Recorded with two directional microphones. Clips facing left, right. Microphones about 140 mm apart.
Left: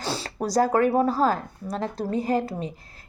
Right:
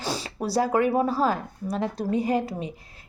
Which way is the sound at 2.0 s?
35° left (ahead or behind).